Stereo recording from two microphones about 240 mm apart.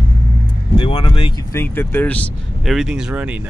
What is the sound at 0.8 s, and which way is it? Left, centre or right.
Speech, centre.